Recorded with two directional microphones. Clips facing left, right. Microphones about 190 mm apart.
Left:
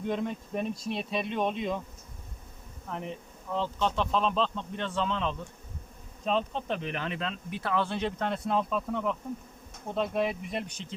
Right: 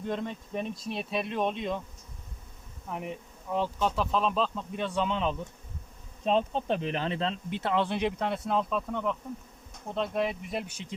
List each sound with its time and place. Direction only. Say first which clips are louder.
0.0 s speech: left 2 dB; centre (ahead or behind)
2.8 s speech: right 1 dB; 10° right (ahead or behind)
6.2 s speech: right 3 dB; 30° right (ahead or behind); by 10.9 s 10° right (ahead or behind)